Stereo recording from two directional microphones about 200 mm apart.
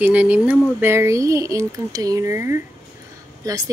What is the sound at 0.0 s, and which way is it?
Speech, 5° right (ahead or behind).